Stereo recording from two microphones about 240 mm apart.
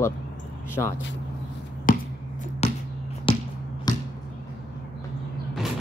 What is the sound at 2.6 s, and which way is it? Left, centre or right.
Basketball bounce, left.